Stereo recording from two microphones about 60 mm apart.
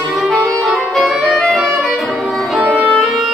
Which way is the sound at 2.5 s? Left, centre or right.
Right.